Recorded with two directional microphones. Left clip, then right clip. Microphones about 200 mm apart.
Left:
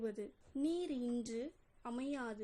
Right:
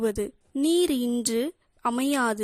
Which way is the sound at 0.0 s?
45° right (ahead or behind).